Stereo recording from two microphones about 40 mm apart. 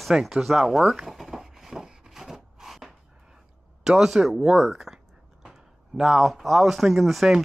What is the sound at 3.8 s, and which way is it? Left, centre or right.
Speech, centre.